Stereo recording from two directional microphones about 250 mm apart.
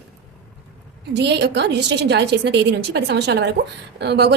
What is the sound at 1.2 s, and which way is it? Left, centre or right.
A woman's voice, right.